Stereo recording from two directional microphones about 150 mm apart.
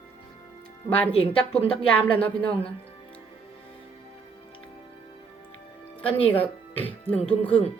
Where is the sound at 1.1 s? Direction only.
40° left (ahead or behind).